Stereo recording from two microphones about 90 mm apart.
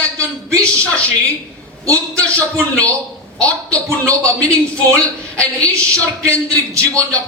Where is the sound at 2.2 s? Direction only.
15° left (ahead or behind).